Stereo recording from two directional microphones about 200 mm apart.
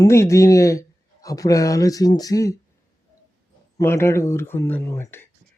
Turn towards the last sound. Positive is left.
turn(degrees=10)  # may be behind; listen again after turning